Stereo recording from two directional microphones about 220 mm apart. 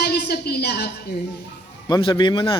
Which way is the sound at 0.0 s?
45° left (ahead or behind).